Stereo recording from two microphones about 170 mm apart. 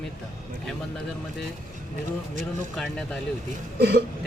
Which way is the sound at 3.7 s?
70° right (ahead or behind).